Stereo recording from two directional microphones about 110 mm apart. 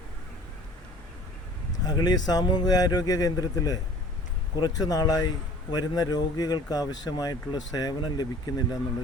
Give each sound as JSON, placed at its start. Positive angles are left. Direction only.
{"t": 1.8, "sound": "speech", "side_deg": 40}